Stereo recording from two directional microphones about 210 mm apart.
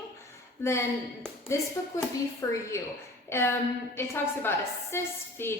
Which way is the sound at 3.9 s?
10° left (ahead or behind).